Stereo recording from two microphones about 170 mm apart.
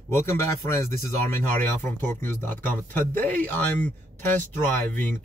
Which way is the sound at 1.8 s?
10° left (ahead or behind).